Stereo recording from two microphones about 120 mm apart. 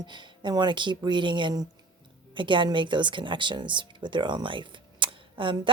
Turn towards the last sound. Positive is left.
turn(degrees=-45)  # may be behind; listen again after turning